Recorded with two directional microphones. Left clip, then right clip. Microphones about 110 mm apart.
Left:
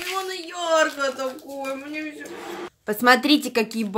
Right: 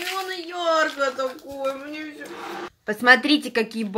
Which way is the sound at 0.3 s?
50° left (ahead or behind).